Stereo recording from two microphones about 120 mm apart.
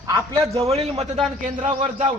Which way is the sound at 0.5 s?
55° right (ahead or behind).